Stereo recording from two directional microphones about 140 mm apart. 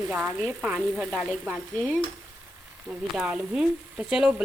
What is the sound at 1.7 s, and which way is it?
Speech, 10° left (ahead or behind).